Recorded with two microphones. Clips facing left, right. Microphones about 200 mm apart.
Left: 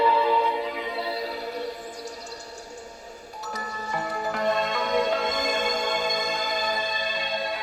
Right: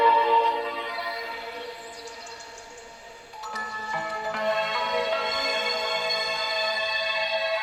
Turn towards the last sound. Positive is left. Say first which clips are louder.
# right 1 dB
turn(degrees=50)  # may be behind; listen again after turning